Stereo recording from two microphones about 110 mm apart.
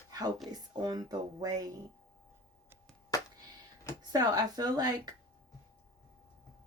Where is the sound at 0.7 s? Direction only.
40° right (ahead or behind).